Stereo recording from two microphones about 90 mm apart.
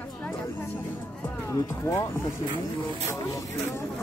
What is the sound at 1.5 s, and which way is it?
Speech, 30° left (ahead or behind).